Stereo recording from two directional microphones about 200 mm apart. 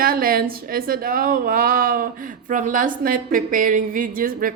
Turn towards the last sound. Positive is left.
turn(degrees=-45)  # may be behind; listen again after turning